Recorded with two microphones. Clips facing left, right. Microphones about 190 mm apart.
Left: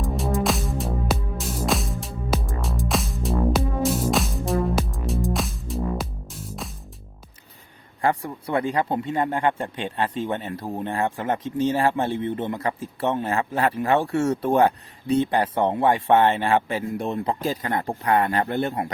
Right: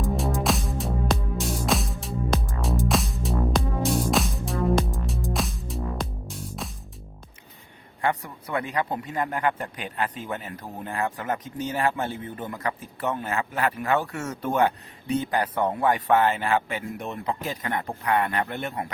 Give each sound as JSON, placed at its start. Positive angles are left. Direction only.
{"t": 0.0, "sound": "music", "side_deg": 0}
{"t": 8.0, "sound": "speech", "side_deg": 30}